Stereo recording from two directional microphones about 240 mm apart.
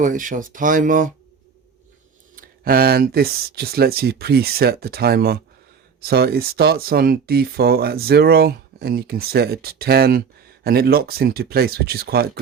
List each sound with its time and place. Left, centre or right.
0.0 s speech: right
2.3 s speech: right